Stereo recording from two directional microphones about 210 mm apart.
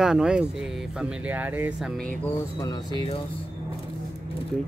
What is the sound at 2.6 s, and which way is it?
Speech, 20° left (ahead or behind).